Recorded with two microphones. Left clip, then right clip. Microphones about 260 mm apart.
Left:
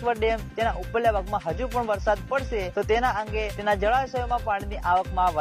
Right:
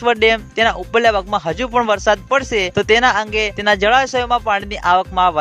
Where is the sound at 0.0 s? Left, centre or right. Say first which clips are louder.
Right 11 dB; right.